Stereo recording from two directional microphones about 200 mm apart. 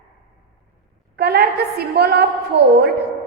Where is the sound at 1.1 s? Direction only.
50° right (ahead or behind).